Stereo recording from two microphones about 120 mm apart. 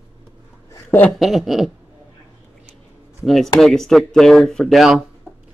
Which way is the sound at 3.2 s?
Centre (ahead or behind).